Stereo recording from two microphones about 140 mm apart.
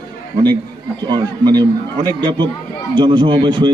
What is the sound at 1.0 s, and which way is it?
A man's voice, 30° right (ahead or behind).